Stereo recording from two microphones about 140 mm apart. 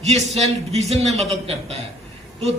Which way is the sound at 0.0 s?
50° right (ahead or behind).